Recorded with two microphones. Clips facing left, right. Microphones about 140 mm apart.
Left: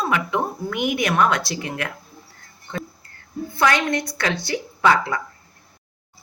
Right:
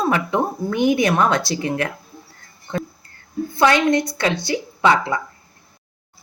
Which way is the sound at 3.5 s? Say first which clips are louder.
Right 4 dB; 25° right (ahead or behind).